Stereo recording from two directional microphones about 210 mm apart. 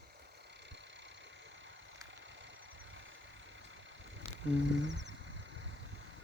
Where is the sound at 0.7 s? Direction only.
55° right (ahead or behind).